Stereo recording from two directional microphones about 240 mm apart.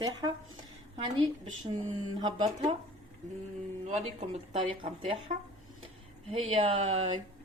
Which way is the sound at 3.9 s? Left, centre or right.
Right.